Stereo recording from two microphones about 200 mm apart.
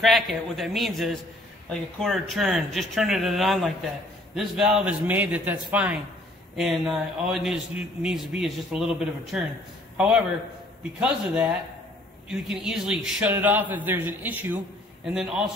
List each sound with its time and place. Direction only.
0.0 s a man's voice: centre (ahead or behind)